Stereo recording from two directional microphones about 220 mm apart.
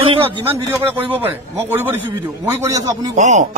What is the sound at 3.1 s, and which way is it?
Speech, 30° right (ahead or behind).